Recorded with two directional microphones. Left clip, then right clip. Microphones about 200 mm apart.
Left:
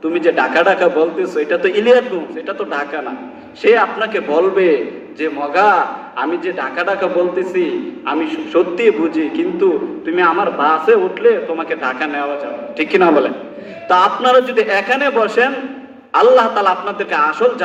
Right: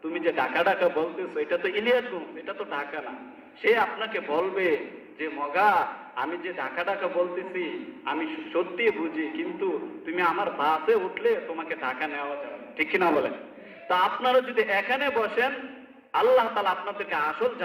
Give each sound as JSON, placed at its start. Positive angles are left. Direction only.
{"t": 0.1, "sound": "a man's voice", "side_deg": 55}
{"t": 8.1, "sound": "a man's voice", "side_deg": 60}